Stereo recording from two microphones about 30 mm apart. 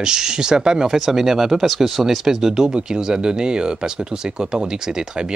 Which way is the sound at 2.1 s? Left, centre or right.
Centre.